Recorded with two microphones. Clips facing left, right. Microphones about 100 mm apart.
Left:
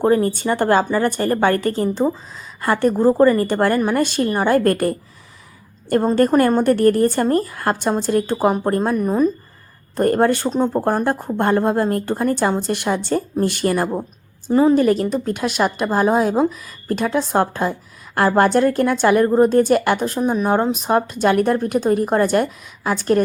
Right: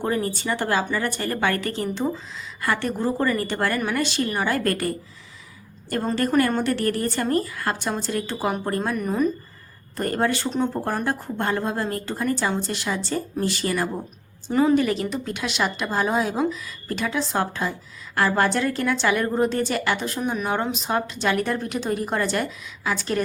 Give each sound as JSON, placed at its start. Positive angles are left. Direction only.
{"t": 0.0, "sound": "a woman's voice", "side_deg": 40}
{"t": 3.8, "sound": "a woman's voice", "side_deg": 35}
{"t": 4.0, "sound": "a woman's voice", "side_deg": 50}
{"t": 6.1, "sound": "a woman's voice", "side_deg": 40}
{"t": 10.0, "sound": "a woman's voice", "side_deg": 50}
{"t": 10.5, "sound": "a woman's voice", "side_deg": 40}
{"t": 14.5, "sound": "a woman's voice", "side_deg": 30}
{"t": 14.8, "sound": "a woman's voice", "side_deg": 40}